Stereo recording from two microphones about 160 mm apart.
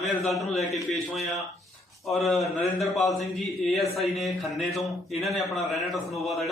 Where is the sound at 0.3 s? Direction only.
Centre (ahead or behind).